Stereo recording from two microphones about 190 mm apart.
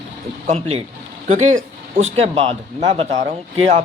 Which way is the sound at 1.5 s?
90° right.